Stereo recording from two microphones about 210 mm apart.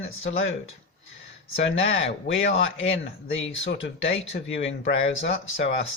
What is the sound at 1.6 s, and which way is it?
Speech, 65° left (ahead or behind).